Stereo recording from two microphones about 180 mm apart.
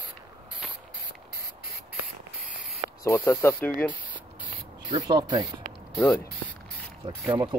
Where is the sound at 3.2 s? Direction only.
10° left (ahead or behind).